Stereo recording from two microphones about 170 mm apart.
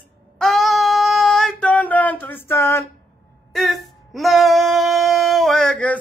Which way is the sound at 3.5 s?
Centre (ahead or behind).